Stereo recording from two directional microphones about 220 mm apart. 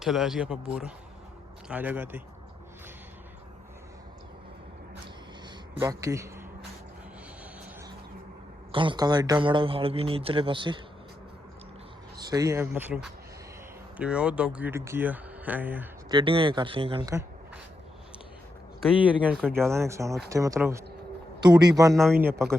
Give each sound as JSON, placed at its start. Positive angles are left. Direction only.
{"t": 0.0, "sound": "a man's voice", "side_deg": 0}
{"t": 5.8, "sound": "speech", "side_deg": -15}
{"t": 8.7, "sound": "a man's voice", "side_deg": -20}
{"t": 12.2, "sound": "speech", "side_deg": -15}
{"t": 16.0, "sound": "a man's voice", "side_deg": -20}
{"t": 18.8, "sound": "a man's voice", "side_deg": -5}